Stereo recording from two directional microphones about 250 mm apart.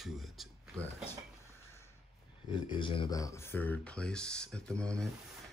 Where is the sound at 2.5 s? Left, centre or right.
Centre.